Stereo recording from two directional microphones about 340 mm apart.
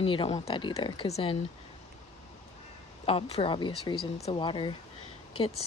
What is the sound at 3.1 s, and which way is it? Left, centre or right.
Speech, centre.